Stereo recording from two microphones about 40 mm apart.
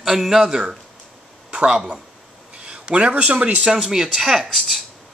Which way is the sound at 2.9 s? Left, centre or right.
Right.